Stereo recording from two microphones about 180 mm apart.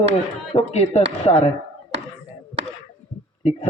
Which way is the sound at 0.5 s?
35° left (ahead or behind).